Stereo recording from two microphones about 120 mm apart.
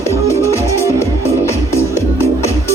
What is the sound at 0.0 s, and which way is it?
Music, 25° left (ahead or behind).